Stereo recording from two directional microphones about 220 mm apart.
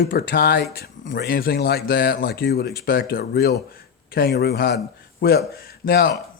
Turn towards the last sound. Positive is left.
turn(degrees=45)  # may be behind; listen again after turning